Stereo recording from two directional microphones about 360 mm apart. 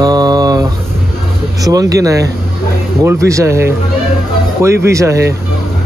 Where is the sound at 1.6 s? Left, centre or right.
Centre.